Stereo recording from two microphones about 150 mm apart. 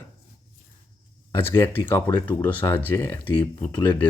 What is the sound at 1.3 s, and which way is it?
Speech, 15° left (ahead or behind).